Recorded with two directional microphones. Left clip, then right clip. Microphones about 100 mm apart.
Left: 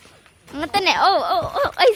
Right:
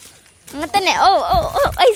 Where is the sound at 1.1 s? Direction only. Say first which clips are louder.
Right 4 dB; 10° right (ahead or behind).